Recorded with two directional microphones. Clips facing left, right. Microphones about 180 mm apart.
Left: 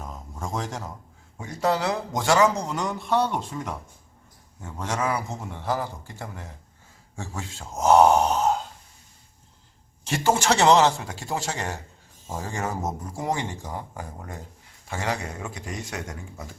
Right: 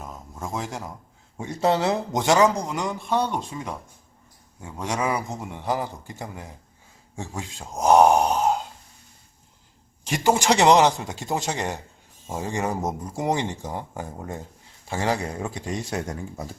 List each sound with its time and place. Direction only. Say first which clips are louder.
0.0 s a sound: even; 5° right (ahead or behind)
1.4 s speech: right 3 dB; 25° right (ahead or behind)
10.1 s speech: right 2 dB; 15° right (ahead or behind); by 16.6 s 35° right (ahead or behind)